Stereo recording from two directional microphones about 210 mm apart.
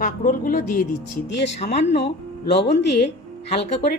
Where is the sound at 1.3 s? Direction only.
55° left (ahead or behind).